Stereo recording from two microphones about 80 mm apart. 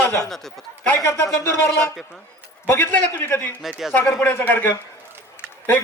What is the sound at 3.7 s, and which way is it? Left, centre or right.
Speech, centre.